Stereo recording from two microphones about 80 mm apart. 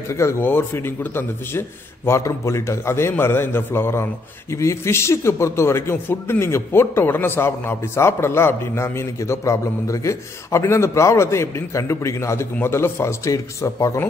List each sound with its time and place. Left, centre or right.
0.1 s a man's voice: left